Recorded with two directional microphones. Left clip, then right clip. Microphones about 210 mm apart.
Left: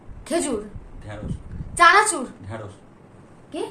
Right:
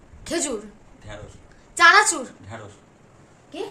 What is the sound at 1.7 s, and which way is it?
Speech, 20° right (ahead or behind).